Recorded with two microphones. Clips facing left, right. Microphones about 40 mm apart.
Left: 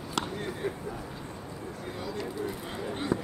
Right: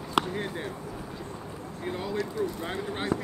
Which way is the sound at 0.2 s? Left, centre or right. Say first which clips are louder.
Right 6 dB; right.